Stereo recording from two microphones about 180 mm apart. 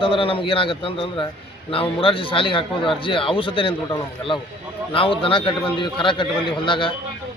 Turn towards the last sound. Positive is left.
turn(degrees=25)  # may be behind; listen again after turning